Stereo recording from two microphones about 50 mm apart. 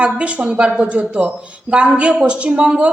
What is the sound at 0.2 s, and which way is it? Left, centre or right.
A woman's voice, right.